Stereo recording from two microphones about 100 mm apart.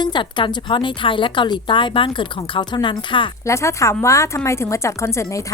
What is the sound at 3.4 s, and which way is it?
A woman's voice, 30° left (ahead or behind).